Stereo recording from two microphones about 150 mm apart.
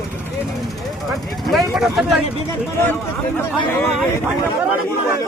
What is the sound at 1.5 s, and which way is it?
Vehicle, centre (ahead or behind).